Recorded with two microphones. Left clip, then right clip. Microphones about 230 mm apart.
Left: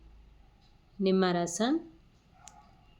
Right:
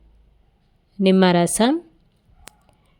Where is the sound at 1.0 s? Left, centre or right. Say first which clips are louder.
Right 11 dB; right.